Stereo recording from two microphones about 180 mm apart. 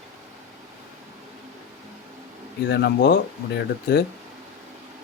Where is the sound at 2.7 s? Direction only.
65° left (ahead or behind).